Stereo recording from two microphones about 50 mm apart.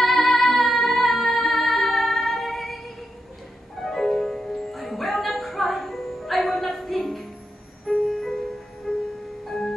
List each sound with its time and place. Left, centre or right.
0.0 s music: centre
6.5 s a sound: centre
7.8 s music: left
8.3 s music: centre